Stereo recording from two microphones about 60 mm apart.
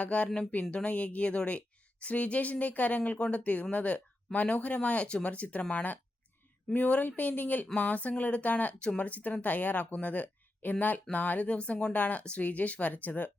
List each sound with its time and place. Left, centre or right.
0.0 s speech: left